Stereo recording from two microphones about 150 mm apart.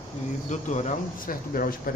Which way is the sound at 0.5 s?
50° left (ahead or behind).